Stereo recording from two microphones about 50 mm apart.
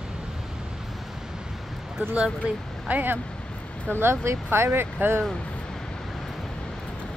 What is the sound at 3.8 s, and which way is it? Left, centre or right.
Speech, right.